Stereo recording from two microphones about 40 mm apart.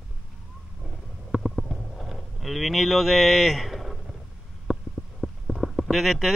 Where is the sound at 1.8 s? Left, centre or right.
Centre.